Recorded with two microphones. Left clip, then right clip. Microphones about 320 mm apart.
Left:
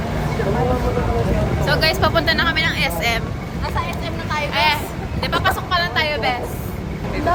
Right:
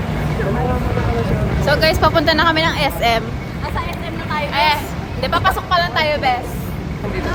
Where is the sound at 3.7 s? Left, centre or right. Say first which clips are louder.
Even; centre.